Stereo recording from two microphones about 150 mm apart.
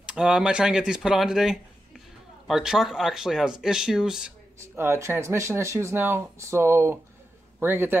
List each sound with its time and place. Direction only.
0.0 s speech: 5° right (ahead or behind)
4.6 s speech: 15° right (ahead or behind)